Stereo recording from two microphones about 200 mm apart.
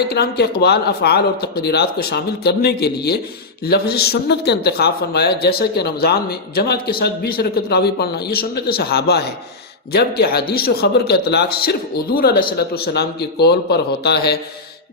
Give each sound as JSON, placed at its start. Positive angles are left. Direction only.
{"t": 0.1, "sound": "a man's voice", "side_deg": 55}